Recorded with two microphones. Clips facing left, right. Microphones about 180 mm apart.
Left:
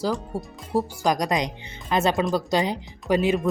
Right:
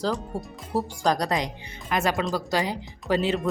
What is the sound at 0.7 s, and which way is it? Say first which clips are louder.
Speech: left 2 dB; 15° left (ahead or behind).